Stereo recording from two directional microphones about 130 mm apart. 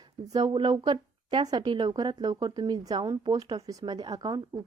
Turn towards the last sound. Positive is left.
turn(degrees=-30)  # may be behind; listen again after turning